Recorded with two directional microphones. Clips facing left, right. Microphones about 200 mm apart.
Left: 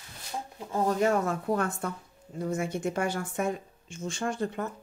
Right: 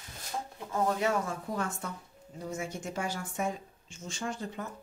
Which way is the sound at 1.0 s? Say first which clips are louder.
Left 5 dB; 60° left (ahead or behind).